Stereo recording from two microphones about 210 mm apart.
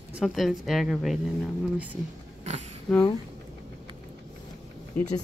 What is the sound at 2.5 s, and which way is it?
Cat, 35° right (ahead or behind).